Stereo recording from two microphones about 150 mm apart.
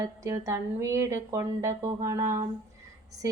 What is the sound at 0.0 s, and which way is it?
Speech, 20° right (ahead or behind).